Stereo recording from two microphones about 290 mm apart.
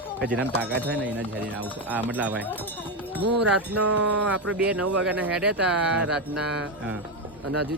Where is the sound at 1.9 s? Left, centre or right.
Centre.